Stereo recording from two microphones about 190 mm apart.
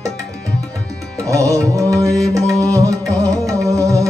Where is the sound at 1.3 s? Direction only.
15° right (ahead or behind).